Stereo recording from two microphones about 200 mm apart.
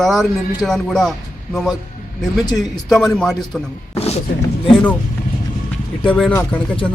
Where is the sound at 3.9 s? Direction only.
30° left (ahead or behind).